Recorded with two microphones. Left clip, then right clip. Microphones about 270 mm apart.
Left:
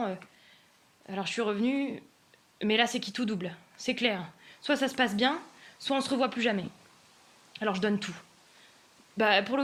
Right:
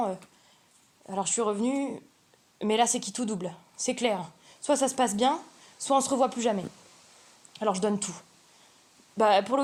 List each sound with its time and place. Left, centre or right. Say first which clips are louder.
1.0 s speech: right 3 dB; right